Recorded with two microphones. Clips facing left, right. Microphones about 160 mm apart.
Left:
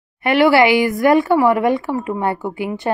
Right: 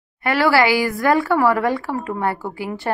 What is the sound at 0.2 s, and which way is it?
Speech, 20° left (ahead or behind).